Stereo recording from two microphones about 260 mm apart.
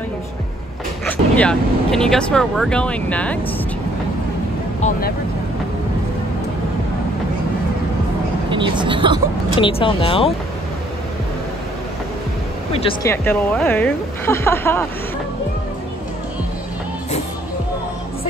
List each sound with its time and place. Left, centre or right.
1.0 s speech: centre
8.5 s speech: centre
9.6 s speech: left
13.1 s speech: centre